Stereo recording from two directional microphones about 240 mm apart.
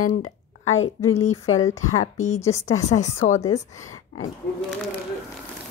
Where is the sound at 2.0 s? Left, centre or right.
Left.